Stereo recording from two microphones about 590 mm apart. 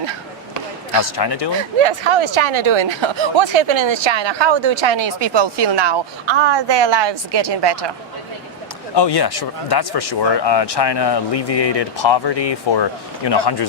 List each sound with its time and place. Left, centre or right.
1.1 s speech: left
1.8 s speech: right
9.0 s speech: left